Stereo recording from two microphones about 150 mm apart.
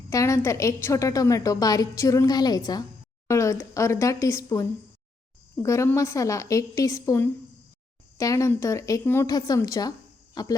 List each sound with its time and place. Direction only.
0.1 s a woman's voice: 20° left (ahead or behind)